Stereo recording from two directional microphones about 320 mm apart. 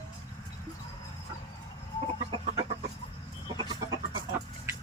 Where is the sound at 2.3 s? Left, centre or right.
Centre.